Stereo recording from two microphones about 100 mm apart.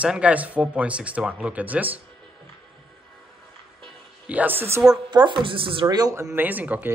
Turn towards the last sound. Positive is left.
turn(degrees=-15)  # may be behind; listen again after turning